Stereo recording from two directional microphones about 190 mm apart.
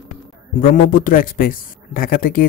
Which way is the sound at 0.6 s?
45° left (ahead or behind).